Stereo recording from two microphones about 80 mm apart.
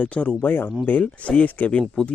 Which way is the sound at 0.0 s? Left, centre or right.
Centre.